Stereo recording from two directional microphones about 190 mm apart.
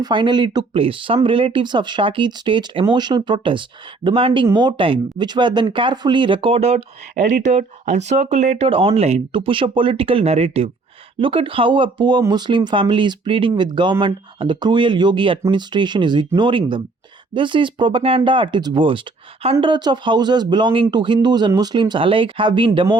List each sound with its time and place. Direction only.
0.0 s speech: 25° right (ahead or behind)